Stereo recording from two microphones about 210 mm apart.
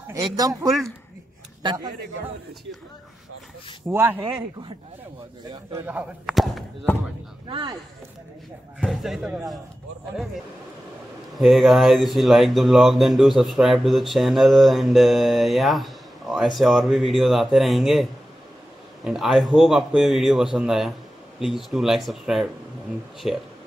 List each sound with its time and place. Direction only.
0.1 s speech: 15° right (ahead or behind)
1.6 s speech: 20° right (ahead or behind)
3.9 s speech: 10° right (ahead or behind)
5.5 s speech: 15° right (ahead or behind); by 7.0 s centre (ahead or behind)
7.4 s speech: 25° right (ahead or behind)
8.7 s speech: centre (ahead or behind)
11.3 s speech: centre (ahead or behind)
19.0 s speech: centre (ahead or behind)